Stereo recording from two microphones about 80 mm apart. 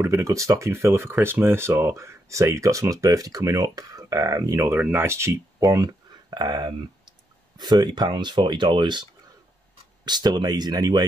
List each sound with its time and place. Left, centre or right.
0.0 s speech: right
5.6 s speech: right
10.0 s speech: right